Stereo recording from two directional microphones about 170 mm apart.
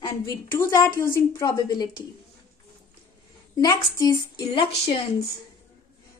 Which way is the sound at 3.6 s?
20° left (ahead or behind).